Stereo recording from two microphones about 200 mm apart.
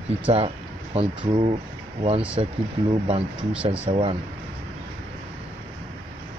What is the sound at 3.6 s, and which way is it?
Speech, 25° right (ahead or behind).